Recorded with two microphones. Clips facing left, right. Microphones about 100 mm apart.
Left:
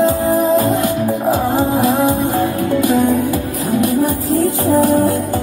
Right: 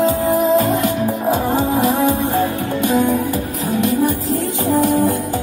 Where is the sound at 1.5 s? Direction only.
30° left (ahead or behind).